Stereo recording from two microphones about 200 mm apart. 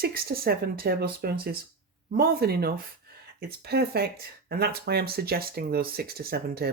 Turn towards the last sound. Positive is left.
turn(degrees=-50)  # may be behind; listen again after turning